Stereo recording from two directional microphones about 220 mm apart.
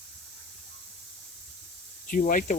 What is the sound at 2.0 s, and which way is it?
Speech, 40° left (ahead or behind).